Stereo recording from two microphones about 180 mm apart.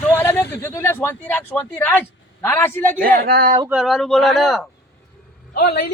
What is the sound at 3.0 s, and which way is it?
Speech, 55° right (ahead or behind).